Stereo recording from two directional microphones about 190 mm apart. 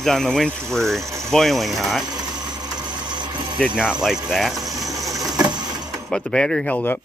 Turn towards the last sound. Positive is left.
turn(degrees=10)  # may be behind; listen again after turning